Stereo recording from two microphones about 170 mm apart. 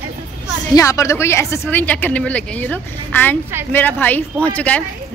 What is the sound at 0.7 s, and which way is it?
A woman's voice, 20° left (ahead or behind).